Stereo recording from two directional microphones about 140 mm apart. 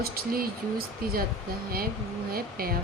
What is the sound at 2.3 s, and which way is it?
Speech, 90° right.